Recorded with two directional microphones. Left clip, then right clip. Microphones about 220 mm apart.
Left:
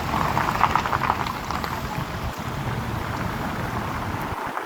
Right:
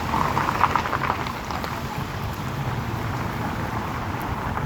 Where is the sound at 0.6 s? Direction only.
50° left (ahead or behind).